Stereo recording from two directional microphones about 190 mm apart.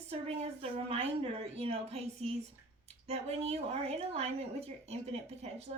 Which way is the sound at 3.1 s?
35° right (ahead or behind).